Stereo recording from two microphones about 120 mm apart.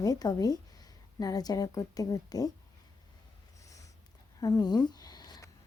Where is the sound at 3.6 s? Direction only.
25° left (ahead or behind).